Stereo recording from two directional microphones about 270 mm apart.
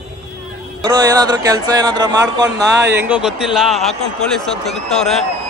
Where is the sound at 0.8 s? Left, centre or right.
Centre.